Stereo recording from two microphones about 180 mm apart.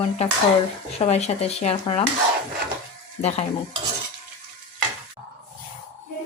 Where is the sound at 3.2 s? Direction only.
35° left (ahead or behind).